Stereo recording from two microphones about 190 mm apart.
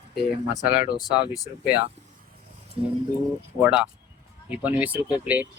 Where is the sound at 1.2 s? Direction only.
20° left (ahead or behind).